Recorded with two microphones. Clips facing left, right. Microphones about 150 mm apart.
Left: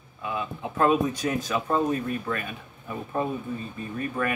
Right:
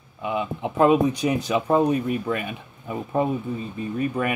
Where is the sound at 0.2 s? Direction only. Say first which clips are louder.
Right 5 dB; 20° right (ahead or behind).